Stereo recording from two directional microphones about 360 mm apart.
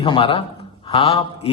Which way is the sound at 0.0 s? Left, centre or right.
Centre.